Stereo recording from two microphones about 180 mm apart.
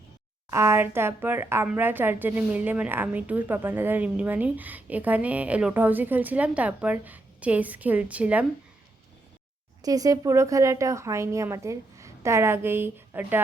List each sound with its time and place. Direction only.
0.5 s a woman's voice: 15° right (ahead or behind)
9.8 s a woman's voice: 20° right (ahead or behind)